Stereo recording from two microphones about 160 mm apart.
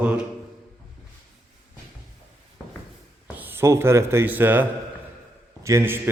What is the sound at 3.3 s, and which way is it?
Speech, 15° right (ahead or behind).